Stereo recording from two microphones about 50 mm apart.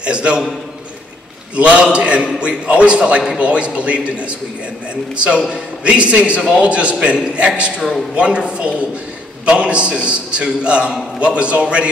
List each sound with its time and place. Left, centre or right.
0.0 s a man's voice: right
1.6 s a man's voice: right
5.1 s a man's voice: right